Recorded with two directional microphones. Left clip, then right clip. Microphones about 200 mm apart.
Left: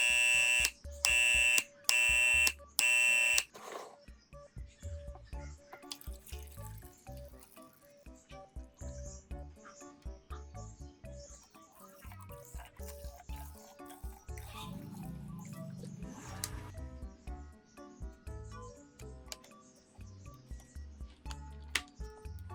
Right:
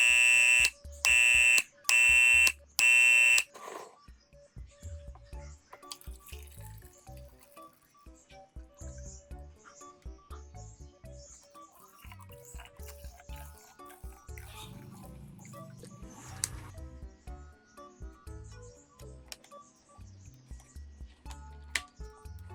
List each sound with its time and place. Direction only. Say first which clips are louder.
0.0 s fire alarm: right 6 dB; 10° right (ahead or behind)
12.5 s music: even; 5° right (ahead or behind)
16.4 s music: right 6 dB; 20° right (ahead or behind)
21.2 s music: left 1 dB; centre (ahead or behind)